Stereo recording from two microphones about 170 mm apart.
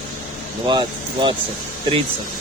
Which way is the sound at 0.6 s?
25° right (ahead or behind).